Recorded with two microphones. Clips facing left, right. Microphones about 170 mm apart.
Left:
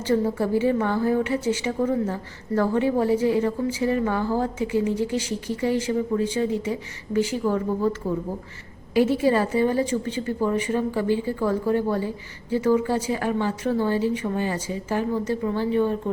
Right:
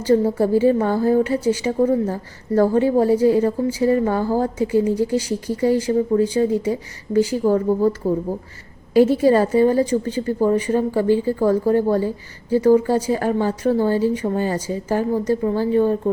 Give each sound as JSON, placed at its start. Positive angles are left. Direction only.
{"t": 0.0, "sound": "a woman's voice", "side_deg": -35}
{"t": 8.9, "sound": "a woman's voice", "side_deg": -40}